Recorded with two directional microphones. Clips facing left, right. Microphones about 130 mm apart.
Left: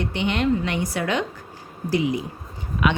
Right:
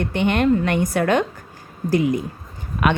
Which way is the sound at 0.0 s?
50° right (ahead or behind).